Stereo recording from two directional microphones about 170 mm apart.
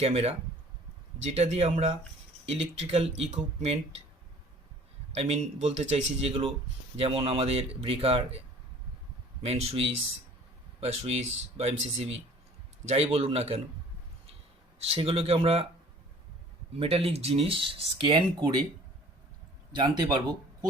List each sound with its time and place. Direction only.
0.0 s speech: 35° right (ahead or behind)
5.1 s speech: 40° right (ahead or behind)
9.4 s speech: 35° right (ahead or behind)
12.9 s speech: 35° right (ahead or behind)
14.8 s speech: 35° right (ahead or behind)
16.7 s speech: 35° right (ahead or behind)
19.7 s speech: 25° right (ahead or behind)